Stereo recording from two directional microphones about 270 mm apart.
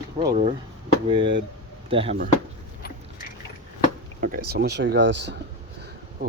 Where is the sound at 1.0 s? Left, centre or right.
Centre.